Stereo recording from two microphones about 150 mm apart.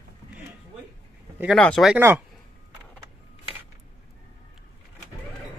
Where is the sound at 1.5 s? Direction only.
5° left (ahead or behind).